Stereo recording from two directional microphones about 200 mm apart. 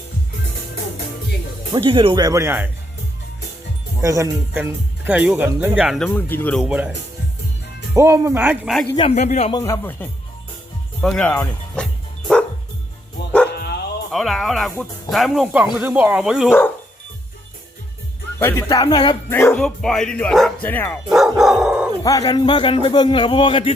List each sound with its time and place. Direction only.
1.7 s speech: 25° right (ahead or behind)
4.0 s speech: 15° right (ahead or behind)
6.1 s speech: 10° left (ahead or behind)
6.7 s speech: 5° right (ahead or behind)
7.9 s speech: 15° right (ahead or behind)
8.7 s speech: 5° left (ahead or behind)
9.0 s a man's voice: 30° left (ahead or behind)
9.5 s speech: 15° left (ahead or behind)
14.1 s speech: centre (ahead or behind)
16.5 s speech: 10° left (ahead or behind)
18.3 s speech: 10° left (ahead or behind)
21.1 s dog: centre (ahead or behind)
22.0 s a man's voice: 15° left (ahead or behind)